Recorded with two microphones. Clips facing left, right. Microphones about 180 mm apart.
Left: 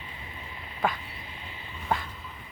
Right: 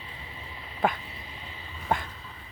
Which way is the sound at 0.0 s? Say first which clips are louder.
Left 1 dB; 30° right (ahead or behind).